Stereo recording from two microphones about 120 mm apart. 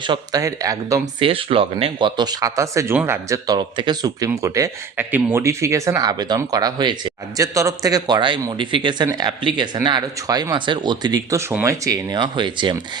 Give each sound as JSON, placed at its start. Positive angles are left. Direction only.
{"t": 0.0, "sound": "speech", "side_deg": -40}
{"t": 1.2, "sound": "speech", "side_deg": -50}